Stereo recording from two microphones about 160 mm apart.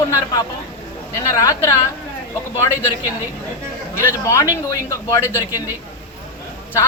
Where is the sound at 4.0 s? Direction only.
15° left (ahead or behind).